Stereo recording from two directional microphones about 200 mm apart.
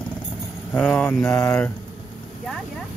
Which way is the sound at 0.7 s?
5° left (ahead or behind).